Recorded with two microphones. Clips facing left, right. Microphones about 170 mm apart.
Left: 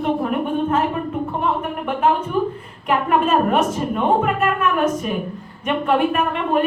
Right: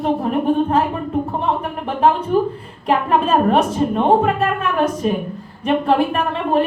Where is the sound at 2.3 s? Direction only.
35° right (ahead or behind).